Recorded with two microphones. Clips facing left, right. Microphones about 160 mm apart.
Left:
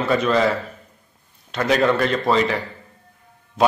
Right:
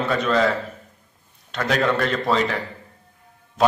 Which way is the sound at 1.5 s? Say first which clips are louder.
Left 3 dB; 5° left (ahead or behind).